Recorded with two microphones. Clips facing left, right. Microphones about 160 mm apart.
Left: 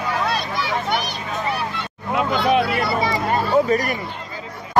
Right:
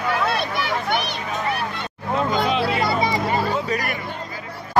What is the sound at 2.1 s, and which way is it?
Vehicle, 65° left (ahead or behind).